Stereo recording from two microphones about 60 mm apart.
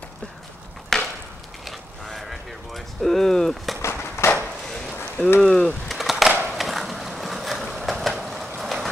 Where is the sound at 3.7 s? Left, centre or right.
Left.